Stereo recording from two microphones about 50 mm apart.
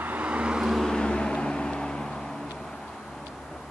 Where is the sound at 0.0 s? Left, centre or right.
Right.